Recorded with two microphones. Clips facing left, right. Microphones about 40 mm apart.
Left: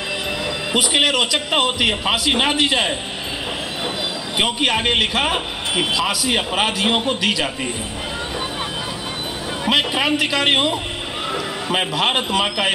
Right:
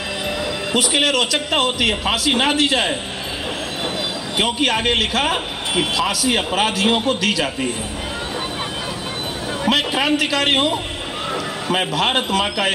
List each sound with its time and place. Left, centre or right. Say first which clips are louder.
0.7 s a man's voice: left 1 dB; centre
4.4 s a man's voice: even; centre
9.7 s a man's voice: even; centre